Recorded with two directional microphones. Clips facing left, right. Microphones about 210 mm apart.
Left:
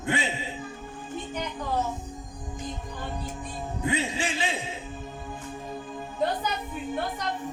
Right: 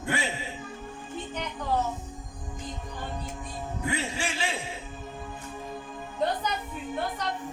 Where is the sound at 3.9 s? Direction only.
20° left (ahead or behind).